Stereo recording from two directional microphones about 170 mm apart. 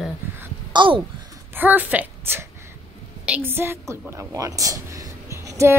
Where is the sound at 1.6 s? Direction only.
10° right (ahead or behind).